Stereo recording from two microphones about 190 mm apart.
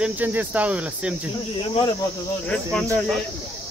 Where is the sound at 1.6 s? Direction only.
25° left (ahead or behind).